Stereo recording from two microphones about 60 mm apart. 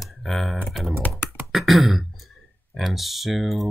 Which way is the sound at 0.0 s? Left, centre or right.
Centre.